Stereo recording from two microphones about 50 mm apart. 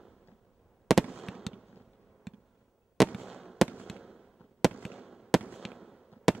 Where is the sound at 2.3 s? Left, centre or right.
Centre.